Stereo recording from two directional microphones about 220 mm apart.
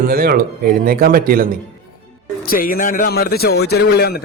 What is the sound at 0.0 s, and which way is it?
A man's voice, 45° right (ahead or behind).